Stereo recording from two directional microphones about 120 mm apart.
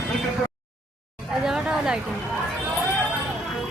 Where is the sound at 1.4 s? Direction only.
5° right (ahead or behind).